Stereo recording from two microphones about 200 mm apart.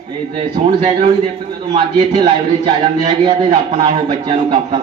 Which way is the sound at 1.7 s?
25° right (ahead or behind).